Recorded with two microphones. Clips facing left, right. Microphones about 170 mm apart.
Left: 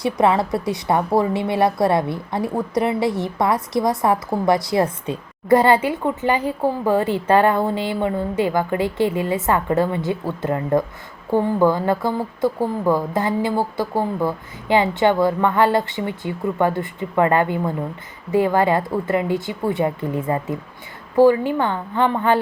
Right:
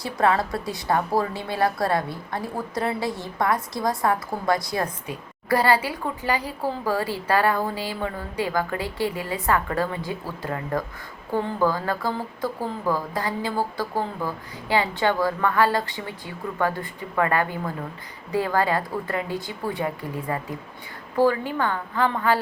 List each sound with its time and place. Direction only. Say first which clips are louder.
0.0 s a woman's voice: left 4 dB; 20° left (ahead or behind)